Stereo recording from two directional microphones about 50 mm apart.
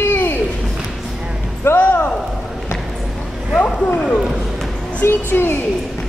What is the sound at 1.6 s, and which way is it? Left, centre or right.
Speech, left.